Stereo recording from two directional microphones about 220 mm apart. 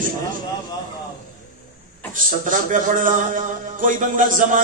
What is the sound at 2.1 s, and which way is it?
A man's voice, 35° right (ahead or behind).